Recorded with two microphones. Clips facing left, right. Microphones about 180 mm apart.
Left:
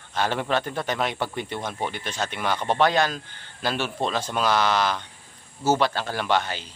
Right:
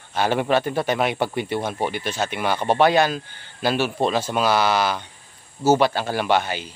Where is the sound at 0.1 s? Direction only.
10° right (ahead or behind).